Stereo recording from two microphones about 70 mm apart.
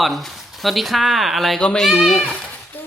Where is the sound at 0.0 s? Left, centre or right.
Centre.